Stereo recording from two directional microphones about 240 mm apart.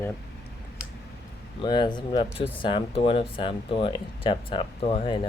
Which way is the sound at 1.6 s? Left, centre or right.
Centre.